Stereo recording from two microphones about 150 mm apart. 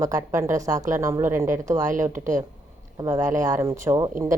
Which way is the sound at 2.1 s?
60° right (ahead or behind).